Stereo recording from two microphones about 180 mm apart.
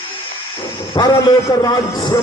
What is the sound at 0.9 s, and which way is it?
A man's voice, 20° left (ahead or behind).